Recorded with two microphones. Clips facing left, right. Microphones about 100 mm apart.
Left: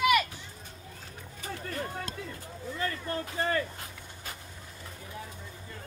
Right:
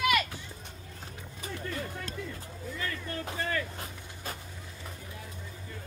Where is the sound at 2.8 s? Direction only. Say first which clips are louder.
Left 4 dB; 35° left (ahead or behind).